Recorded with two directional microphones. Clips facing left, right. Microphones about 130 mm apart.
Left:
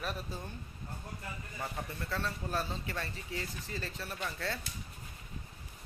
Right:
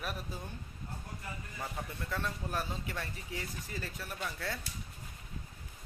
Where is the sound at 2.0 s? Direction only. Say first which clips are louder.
Left 1 dB; 15° right (ahead or behind).